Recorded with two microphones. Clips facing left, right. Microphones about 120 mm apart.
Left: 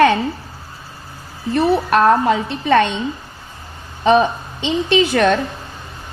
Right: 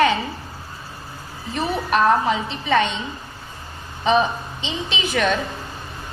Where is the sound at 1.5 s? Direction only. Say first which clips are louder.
Left 7 dB; 70° left (ahead or behind).